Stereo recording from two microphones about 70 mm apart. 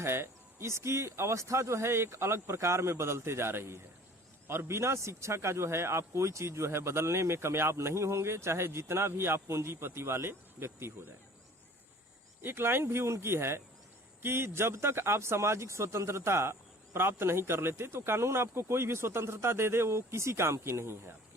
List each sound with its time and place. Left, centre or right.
0.0 s a man's voice: right
12.4 s a man's voice: right